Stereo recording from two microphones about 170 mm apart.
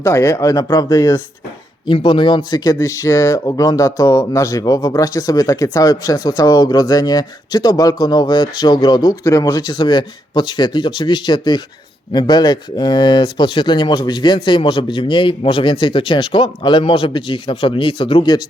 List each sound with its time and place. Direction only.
0.0 s speech: 15° left (ahead or behind)